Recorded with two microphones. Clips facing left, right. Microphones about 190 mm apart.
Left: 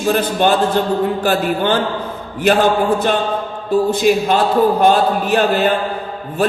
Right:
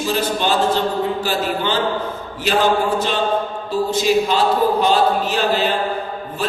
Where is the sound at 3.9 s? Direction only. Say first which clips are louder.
Left 3 dB; 55° left (ahead or behind).